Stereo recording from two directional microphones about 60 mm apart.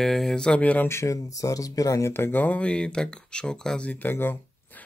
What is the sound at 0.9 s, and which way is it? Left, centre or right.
Speech, left.